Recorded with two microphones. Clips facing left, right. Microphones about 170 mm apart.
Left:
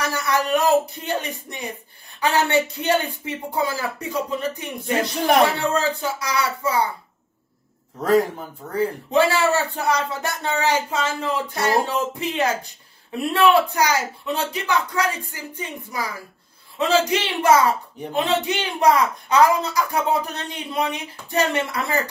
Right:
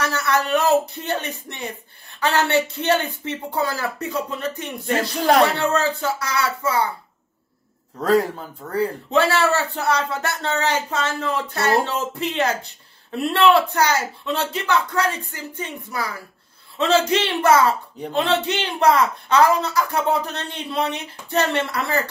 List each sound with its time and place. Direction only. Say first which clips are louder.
0.0 s a man's voice: right 1 dB; 15° left (ahead or behind)
8.7 s a man's voice: left 1 dB; 15° left (ahead or behind)